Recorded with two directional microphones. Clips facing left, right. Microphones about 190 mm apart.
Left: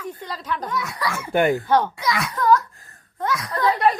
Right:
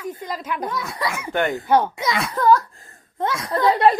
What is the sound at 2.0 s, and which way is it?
Speech, 25° right (ahead or behind).